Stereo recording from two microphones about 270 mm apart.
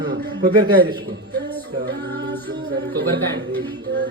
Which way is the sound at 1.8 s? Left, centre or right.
Right.